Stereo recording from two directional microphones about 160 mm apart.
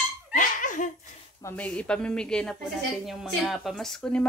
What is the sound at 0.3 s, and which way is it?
Laughter, 55° left (ahead or behind).